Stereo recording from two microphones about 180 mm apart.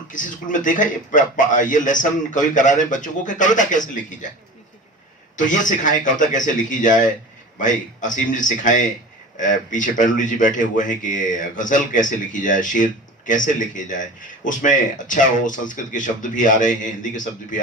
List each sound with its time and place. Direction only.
0.1 s speech: 45° left (ahead or behind)
5.4 s speech: 45° left (ahead or behind)